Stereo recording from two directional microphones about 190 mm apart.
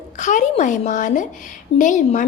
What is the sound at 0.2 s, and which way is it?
A woman's voice, 40° left (ahead or behind).